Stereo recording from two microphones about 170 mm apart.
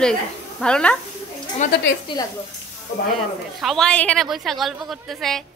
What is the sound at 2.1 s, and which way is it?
Speech, 30° left (ahead or behind).